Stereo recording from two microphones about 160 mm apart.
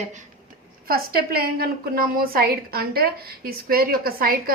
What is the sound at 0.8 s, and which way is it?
A woman's voice, 70° right (ahead or behind).